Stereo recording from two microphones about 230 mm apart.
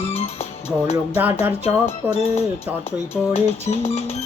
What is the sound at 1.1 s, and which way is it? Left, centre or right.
Music, centre.